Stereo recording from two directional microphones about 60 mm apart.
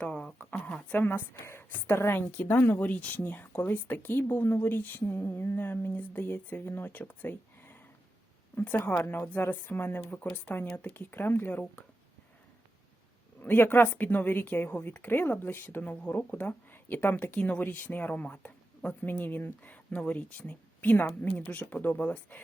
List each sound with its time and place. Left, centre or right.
0.0 s speech: centre
0.9 s a woman's voice: left
2.3 s speech: left
9.0 s speech: left
13.4 s speech: left
15.9 s speech: left